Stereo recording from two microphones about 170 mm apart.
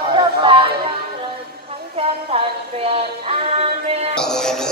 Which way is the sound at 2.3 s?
35° right (ahead or behind).